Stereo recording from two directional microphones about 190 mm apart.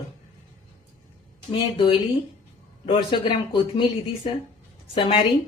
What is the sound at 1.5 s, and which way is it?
A woman's voice, 30° left (ahead or behind).